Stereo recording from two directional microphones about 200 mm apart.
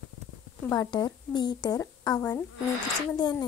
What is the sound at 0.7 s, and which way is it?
Speech, 20° left (ahead or behind).